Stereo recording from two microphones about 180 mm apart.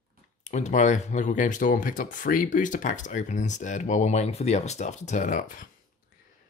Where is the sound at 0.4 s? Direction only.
40° left (ahead or behind).